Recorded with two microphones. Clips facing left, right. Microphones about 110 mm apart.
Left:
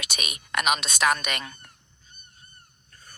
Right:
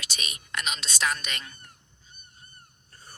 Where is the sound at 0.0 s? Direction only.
60° left (ahead or behind).